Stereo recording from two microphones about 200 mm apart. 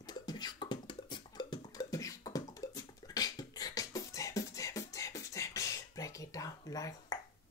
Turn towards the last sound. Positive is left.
turn(degrees=15)  # may be behind; listen again after turning